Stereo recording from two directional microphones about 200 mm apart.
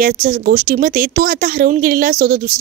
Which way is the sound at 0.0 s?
45° right (ahead or behind).